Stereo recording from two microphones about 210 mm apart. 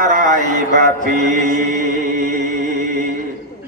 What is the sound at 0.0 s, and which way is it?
A man's voice, 40° right (ahead or behind).